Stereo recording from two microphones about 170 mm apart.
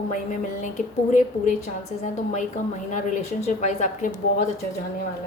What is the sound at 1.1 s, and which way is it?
Speech, 45° left (ahead or behind).